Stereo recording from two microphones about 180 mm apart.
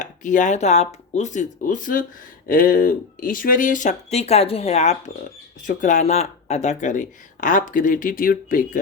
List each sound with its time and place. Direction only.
0.0 s speech: 45° left (ahead or behind)